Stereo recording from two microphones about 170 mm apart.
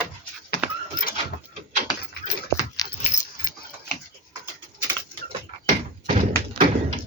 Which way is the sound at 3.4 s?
55° left (ahead or behind).